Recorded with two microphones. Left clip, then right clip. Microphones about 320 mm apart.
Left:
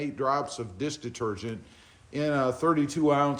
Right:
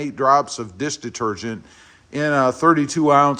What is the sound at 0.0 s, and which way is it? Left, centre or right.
A man's voice, right.